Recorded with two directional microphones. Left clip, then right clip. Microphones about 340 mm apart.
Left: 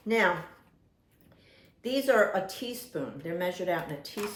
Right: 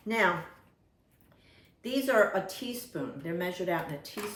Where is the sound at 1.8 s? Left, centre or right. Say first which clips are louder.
Left 1 dB; centre.